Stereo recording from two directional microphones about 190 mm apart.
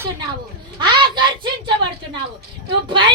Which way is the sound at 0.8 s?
25° right (ahead or behind).